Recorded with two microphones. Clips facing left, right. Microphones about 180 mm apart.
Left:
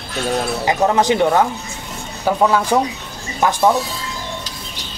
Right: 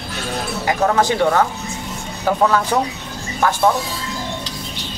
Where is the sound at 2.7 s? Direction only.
15° left (ahead or behind).